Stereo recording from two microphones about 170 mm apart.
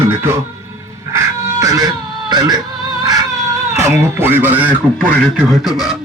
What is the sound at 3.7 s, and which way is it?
Music, 15° right (ahead or behind).